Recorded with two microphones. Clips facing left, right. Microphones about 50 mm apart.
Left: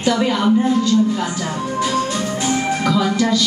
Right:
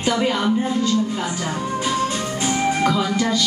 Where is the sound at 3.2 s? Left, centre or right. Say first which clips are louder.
Left 3 dB; right.